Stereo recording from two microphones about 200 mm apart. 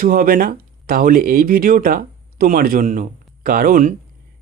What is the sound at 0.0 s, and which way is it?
A man's voice, 45° right (ahead or behind).